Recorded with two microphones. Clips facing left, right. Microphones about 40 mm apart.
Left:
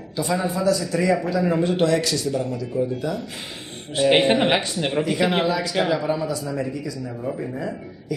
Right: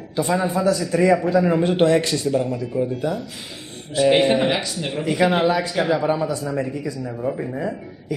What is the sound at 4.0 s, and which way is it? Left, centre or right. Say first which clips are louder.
Speech: right 1 dB; left.